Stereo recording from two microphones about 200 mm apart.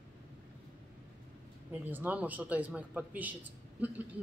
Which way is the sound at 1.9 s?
10° right (ahead or behind).